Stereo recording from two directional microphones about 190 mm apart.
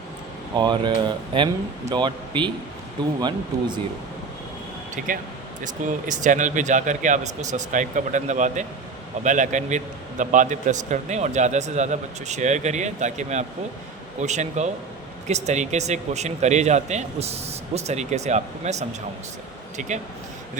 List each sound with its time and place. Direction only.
0.5 s speech: 25° right (ahead or behind)
5.0 s a man's voice: 40° right (ahead or behind)